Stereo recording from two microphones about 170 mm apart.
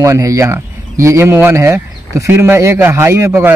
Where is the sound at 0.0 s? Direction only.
20° right (ahead or behind).